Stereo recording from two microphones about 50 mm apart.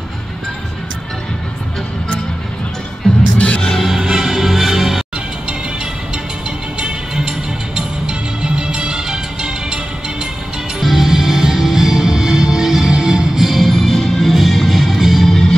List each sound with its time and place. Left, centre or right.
3.0 s music: centre
3.7 s music: centre
6.8 s music: centre
10.8 s music: centre
15.2 s music: centre